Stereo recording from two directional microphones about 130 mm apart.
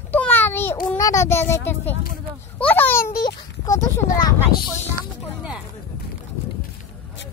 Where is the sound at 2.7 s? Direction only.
15° left (ahead or behind).